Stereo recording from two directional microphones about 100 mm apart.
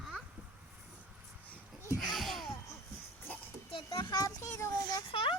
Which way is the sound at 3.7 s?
45° left (ahead or behind).